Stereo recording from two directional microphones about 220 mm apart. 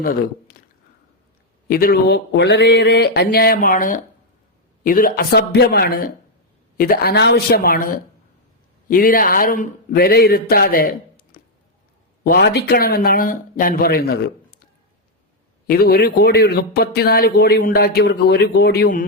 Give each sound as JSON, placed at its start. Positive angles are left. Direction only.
{"t": 1.6, "sound": "a man's voice", "side_deg": 40}
{"t": 8.9, "sound": "a man's voice", "side_deg": 40}
{"t": 15.6, "sound": "a man's voice", "side_deg": 45}